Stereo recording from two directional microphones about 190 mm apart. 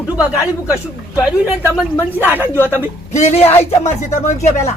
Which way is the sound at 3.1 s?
35° left (ahead or behind).